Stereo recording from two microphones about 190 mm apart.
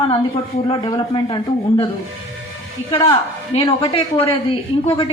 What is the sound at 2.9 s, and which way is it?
A woman's voice, 30° left (ahead or behind).